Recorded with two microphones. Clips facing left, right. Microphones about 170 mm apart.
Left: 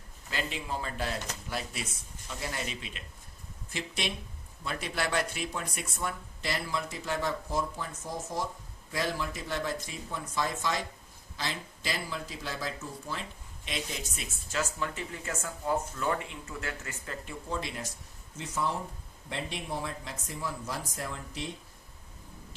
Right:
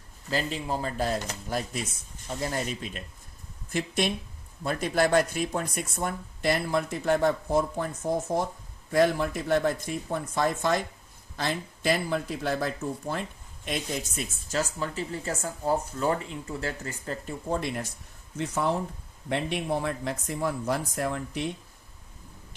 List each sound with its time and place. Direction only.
0.3 s speech: 40° right (ahead or behind)
17.5 s speech: 55° right (ahead or behind)